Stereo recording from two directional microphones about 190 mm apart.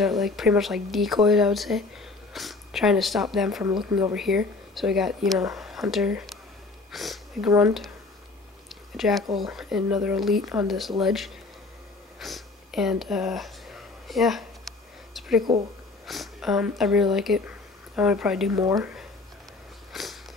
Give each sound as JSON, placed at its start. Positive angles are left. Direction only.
{"t": 0.0, "sound": "speech", "side_deg": 0}
{"t": 8.9, "sound": "speech", "side_deg": 0}
{"t": 14.0, "sound": "a sound", "side_deg": 0}
{"t": 16.1, "sound": "speech", "side_deg": 0}
{"t": 18.5, "sound": "speech", "side_deg": -15}
{"t": 19.9, "sound": "a sound", "side_deg": 0}